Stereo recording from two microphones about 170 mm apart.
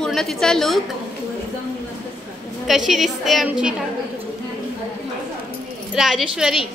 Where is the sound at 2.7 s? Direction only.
Centre (ahead or behind).